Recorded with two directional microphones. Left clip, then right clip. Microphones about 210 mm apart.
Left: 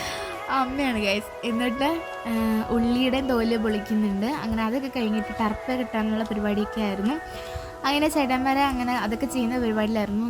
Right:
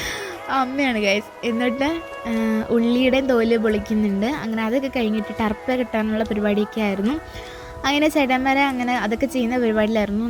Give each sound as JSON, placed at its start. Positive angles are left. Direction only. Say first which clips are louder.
{"t": 0.5, "sound": "speech", "louder": "right 4 dB", "side_deg": -15}